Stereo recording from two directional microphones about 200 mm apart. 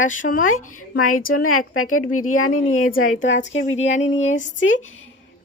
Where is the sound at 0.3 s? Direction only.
40° left (ahead or behind).